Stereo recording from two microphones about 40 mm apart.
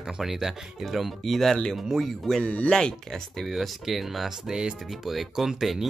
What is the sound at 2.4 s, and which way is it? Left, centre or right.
Speech, left.